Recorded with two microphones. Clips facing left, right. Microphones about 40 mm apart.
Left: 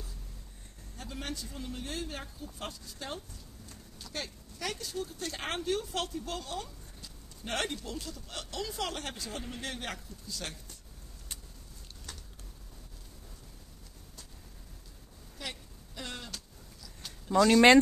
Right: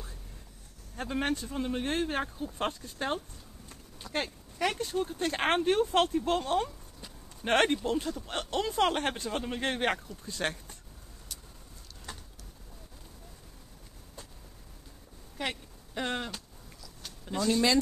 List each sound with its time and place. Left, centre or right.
0.9 s speech: right
12.1 s pigeon: right
15.3 s a sound: right
17.4 s speech: left